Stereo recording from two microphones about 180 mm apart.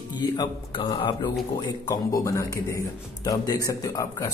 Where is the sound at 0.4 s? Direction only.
25° left (ahead or behind).